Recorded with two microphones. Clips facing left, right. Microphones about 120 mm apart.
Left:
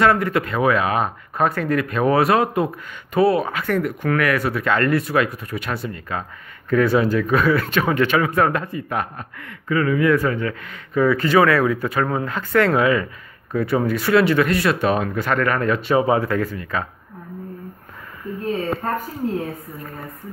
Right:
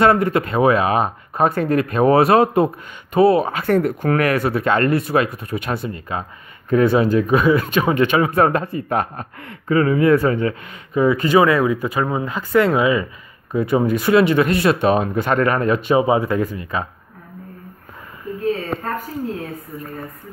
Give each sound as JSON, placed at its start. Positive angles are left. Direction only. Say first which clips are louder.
{"t": 0.0, "sound": "speech", "louder": "right 2 dB", "side_deg": -25}